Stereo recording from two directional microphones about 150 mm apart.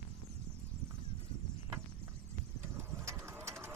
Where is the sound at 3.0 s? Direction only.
20° right (ahead or behind).